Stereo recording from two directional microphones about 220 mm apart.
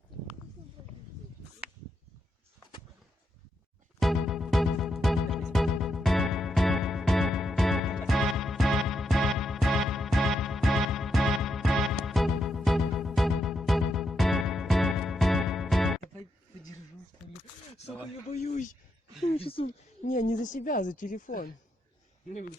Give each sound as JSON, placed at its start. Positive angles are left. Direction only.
{"t": 4.0, "sound": "music", "side_deg": 0}
{"t": 18.3, "sound": "a woman's voice", "side_deg": 30}